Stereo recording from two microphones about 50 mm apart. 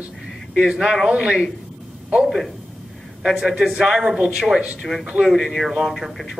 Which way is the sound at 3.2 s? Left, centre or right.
Centre.